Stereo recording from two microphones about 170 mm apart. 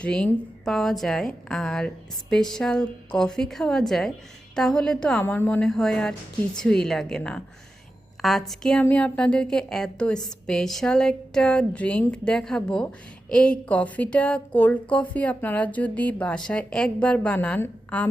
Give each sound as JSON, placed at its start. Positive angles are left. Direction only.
{"t": 0.0, "sound": "a woman's voice", "side_deg": 5}